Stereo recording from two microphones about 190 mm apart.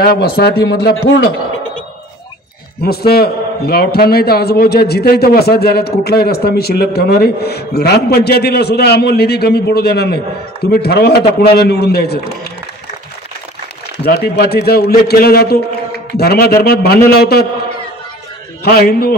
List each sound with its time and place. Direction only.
0.0 s a man's voice: 55° left (ahead or behind)
2.8 s a man's voice: 55° left (ahead or behind)
14.0 s a man's voice: 60° left (ahead or behind)
18.6 s a man's voice: 55° left (ahead or behind)